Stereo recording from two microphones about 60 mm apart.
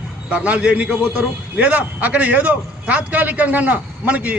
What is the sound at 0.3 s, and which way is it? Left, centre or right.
A man's voice, right.